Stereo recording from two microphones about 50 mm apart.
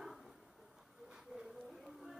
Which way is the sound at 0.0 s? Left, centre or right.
Centre.